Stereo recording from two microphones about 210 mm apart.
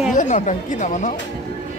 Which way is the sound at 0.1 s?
35° left (ahead or behind).